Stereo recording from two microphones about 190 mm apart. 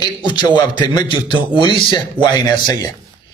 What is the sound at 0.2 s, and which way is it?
A man's voice, 25° left (ahead or behind).